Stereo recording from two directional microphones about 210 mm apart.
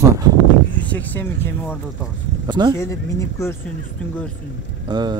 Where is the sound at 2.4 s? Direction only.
20° right (ahead or behind).